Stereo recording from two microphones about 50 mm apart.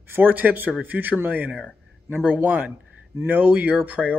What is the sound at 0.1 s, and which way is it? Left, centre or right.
Speech, right.